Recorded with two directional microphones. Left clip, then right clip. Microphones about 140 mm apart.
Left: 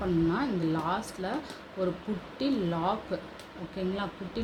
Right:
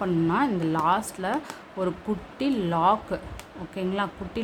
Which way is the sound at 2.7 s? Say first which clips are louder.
Right 8 dB; 20° right (ahead or behind).